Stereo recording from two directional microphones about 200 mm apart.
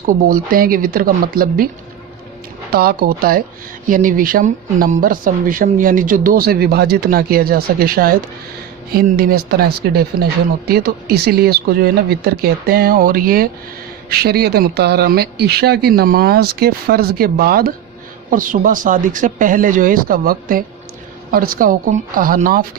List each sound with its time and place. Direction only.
0.1 s speech: 45° right (ahead or behind)